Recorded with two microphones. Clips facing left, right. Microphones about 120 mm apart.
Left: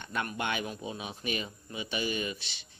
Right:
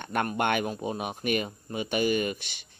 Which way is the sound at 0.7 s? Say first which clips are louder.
Right 7 dB; 45° right (ahead or behind).